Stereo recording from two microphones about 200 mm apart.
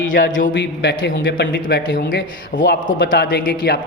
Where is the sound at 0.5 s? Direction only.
60° left (ahead or behind).